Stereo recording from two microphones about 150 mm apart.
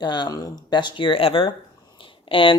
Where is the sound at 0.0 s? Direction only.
30° left (ahead or behind).